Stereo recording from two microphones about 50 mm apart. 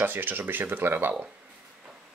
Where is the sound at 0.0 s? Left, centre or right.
Right.